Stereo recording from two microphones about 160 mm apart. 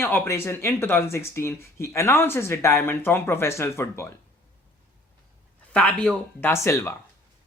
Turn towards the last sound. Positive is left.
turn(degrees=15)  # may be behind; listen again after turning